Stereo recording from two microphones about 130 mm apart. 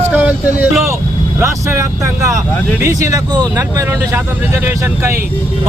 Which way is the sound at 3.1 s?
30° right (ahead or behind).